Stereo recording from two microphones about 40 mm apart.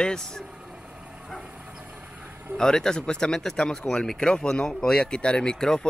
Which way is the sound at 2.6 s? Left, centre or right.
Centre.